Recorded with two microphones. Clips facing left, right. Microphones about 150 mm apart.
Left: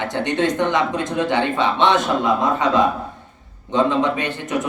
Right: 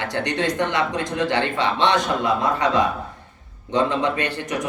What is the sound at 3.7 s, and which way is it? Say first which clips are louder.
Speech: left 3 dB; 20° left (ahead or behind).